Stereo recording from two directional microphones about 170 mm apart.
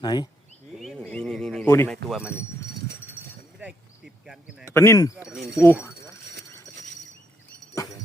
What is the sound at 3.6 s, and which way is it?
Insect, 5° right (ahead or behind).